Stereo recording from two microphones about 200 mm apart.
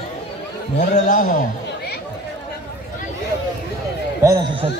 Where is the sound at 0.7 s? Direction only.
40° left (ahead or behind).